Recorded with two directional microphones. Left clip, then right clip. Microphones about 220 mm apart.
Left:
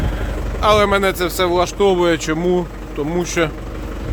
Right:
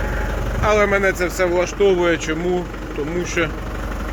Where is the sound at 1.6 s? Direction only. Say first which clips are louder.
Left 1 dB; 40° left (ahead or behind).